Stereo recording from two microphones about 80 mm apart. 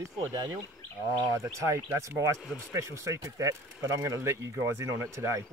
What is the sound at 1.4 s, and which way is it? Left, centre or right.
Speech, right.